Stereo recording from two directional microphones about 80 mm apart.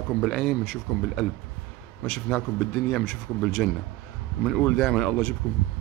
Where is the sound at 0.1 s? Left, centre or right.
Centre.